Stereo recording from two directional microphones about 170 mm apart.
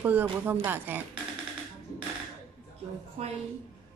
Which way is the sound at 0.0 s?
10° right (ahead or behind).